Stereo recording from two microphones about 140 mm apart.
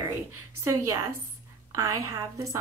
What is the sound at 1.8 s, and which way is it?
Speech, 25° right (ahead or behind).